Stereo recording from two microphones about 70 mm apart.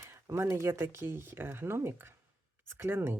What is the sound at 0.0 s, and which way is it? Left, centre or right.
Speech, right.